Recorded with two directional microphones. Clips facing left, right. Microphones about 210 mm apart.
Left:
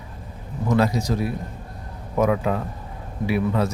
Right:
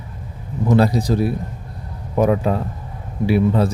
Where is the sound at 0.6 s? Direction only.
35° right (ahead or behind).